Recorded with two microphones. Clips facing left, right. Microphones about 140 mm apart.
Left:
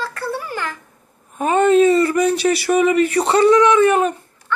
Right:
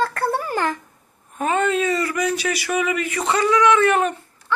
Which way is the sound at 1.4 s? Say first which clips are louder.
Left 7 dB; 25° left (ahead or behind).